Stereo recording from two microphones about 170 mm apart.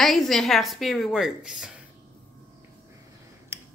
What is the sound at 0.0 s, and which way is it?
A woman's voice, centre (ahead or behind).